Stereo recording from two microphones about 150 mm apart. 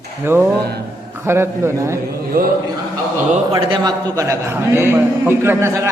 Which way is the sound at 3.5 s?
25° right (ahead or behind).